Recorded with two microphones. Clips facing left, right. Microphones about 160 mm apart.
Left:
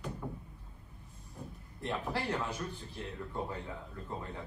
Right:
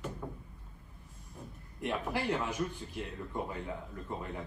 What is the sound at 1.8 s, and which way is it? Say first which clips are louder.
Speech: right 2 dB; 15° right (ahead or behind).